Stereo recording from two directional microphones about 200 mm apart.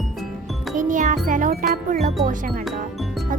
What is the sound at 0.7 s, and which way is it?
A child's voice, 40° right (ahead or behind).